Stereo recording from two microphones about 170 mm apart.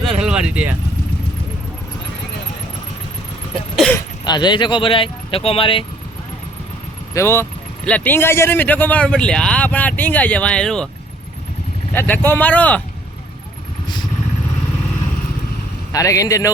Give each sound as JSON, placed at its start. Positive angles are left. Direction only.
{"t": 0.0, "sound": "vehicle", "side_deg": -5}
{"t": 3.9, "sound": "speech", "side_deg": 25}
{"t": 7.1, "sound": "speech", "side_deg": 15}
{"t": 11.9, "sound": "speech", "side_deg": 10}
{"t": 15.9, "sound": "a man's voice", "side_deg": 20}